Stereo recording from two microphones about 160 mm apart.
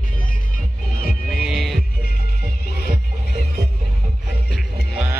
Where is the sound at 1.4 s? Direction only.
Centre (ahead or behind).